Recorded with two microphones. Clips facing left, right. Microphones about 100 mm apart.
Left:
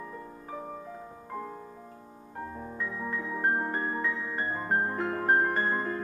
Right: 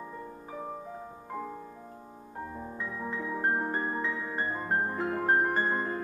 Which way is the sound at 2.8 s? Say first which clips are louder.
Left 1 dB; 5° right (ahead or behind).